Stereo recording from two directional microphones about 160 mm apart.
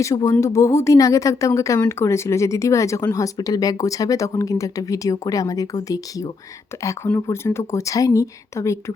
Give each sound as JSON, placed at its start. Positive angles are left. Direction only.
{"t": 0.0, "sound": "speech", "side_deg": 20}